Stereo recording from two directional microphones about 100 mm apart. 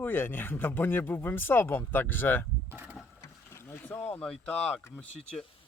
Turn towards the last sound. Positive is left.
turn(degrees=10)  # may be behind; listen again after turning